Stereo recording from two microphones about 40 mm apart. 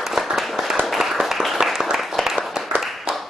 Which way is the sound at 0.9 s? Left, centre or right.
Centre.